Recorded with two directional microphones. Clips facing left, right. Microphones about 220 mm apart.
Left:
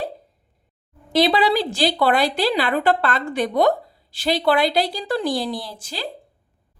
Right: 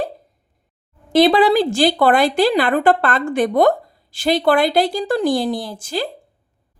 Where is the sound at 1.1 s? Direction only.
50° right (ahead or behind).